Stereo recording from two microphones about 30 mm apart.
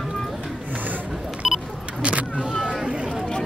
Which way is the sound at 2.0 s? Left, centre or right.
Right.